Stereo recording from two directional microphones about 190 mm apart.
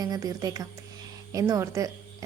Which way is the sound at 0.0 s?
20° right (ahead or behind).